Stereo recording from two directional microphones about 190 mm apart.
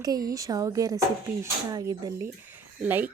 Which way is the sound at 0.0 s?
20° right (ahead or behind).